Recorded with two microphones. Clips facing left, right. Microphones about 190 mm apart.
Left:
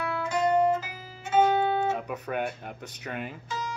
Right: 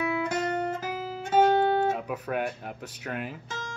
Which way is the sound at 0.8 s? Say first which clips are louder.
Right 11 dB; 45° right (ahead or behind).